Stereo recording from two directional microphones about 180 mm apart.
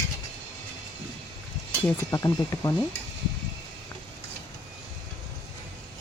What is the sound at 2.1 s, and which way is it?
Speech, 20° left (ahead or behind).